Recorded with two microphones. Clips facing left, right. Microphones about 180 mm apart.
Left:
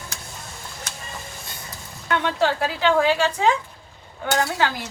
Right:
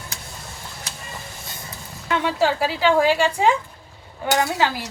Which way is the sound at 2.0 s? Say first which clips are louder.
Right 1 dB; 5° right (ahead or behind).